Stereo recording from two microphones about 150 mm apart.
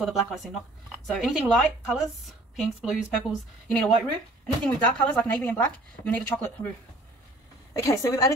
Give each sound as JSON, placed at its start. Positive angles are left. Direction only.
{"t": 0.0, "sound": "speech", "side_deg": 0}
{"t": 7.7, "sound": "a woman's voice", "side_deg": 20}